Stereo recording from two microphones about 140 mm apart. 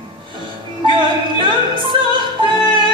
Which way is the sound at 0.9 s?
35° right (ahead or behind).